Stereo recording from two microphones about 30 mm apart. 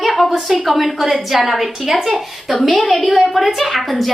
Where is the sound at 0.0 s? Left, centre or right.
Centre.